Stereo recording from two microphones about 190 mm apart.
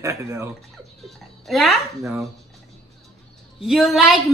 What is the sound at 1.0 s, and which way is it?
Speech, centre (ahead or behind).